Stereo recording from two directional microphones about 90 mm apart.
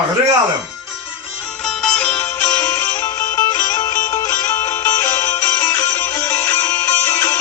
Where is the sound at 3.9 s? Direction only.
35° left (ahead or behind).